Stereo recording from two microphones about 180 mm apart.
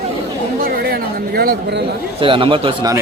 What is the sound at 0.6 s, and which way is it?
Chatter, 55° right (ahead or behind).